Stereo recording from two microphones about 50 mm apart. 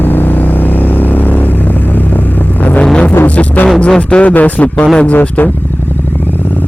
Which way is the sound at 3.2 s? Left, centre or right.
Left.